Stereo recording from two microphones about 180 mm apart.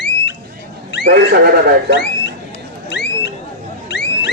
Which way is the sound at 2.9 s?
70° left (ahead or behind).